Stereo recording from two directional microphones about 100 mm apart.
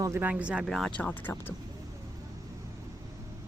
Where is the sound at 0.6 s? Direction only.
5° left (ahead or behind).